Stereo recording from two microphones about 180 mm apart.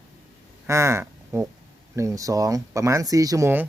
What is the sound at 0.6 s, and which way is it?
Speech, 15° right (ahead or behind).